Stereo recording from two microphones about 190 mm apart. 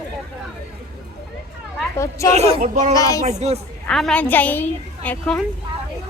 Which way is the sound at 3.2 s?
35° right (ahead or behind).